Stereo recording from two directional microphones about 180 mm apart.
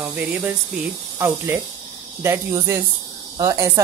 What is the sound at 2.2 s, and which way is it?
Speech, 15° right (ahead or behind).